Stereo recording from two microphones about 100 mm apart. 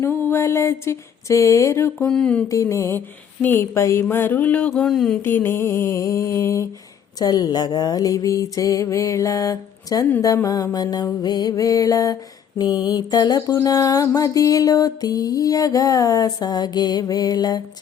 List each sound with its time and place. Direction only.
0.0 s a sound: 25° left (ahead or behind)
2.0 s speech: 10° left (ahead or behind)
2.5 s music: 30° left (ahead or behind)
3.4 s speech: 20° left (ahead or behind); by 5.2 s 5° left (ahead or behind)
5.2 s a sound: 20° left (ahead or behind)
7.2 s music: 40° left (ahead or behind)